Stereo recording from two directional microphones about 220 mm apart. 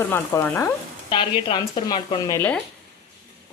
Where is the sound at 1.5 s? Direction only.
20° left (ahead or behind).